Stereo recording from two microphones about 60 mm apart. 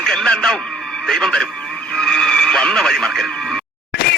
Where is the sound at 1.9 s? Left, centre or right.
Centre.